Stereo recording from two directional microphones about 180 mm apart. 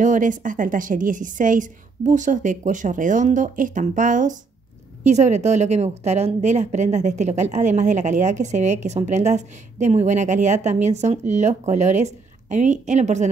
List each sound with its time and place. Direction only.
0.0 s a woman's voice: 45° right (ahead or behind)